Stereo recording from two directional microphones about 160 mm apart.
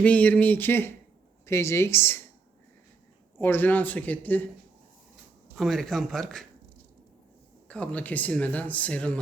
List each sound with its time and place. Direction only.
0.0 s speech: 10° left (ahead or behind)
3.3 s speech: 15° left (ahead or behind)
5.5 s speech: centre (ahead or behind)
7.7 s speech: 5° left (ahead or behind)